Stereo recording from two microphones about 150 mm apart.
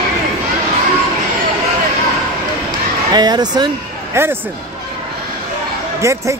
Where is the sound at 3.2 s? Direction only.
25° right (ahead or behind).